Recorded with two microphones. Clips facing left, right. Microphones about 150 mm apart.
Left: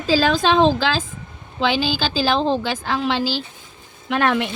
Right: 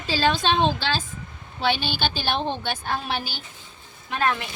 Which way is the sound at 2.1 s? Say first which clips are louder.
Left 7 dB; 90° left.